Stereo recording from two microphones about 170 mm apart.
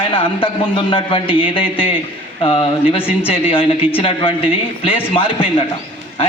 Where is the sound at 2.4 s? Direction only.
35° left (ahead or behind).